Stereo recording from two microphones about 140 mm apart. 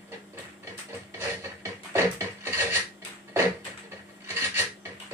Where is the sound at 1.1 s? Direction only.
15° right (ahead or behind).